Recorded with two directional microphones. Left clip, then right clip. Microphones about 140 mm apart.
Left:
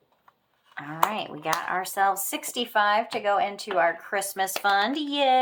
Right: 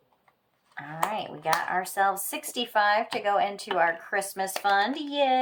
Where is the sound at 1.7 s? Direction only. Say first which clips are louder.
Left 1 dB; 40° left (ahead or behind).